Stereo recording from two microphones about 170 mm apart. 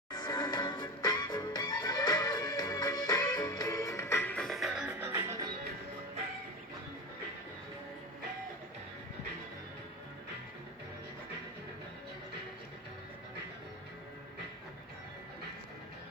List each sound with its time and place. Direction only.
0.1 s music: 25° left (ahead or behind); by 5.5 s 15° right (ahead or behind)